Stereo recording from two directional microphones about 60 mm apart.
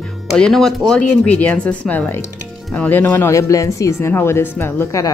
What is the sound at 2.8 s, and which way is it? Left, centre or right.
Speech, left.